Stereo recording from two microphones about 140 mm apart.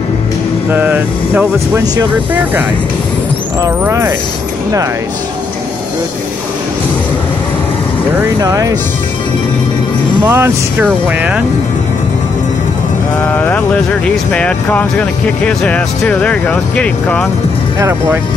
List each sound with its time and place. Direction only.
0.7 s speech: 15° right (ahead or behind)
3.6 s speech: 20° right (ahead or behind)
8.4 s speech: 25° right (ahead or behind)
10.2 s speech: 15° right (ahead or behind)
14.0 s speech: 10° left (ahead or behind)
17.7 s speech: 20° right (ahead or behind)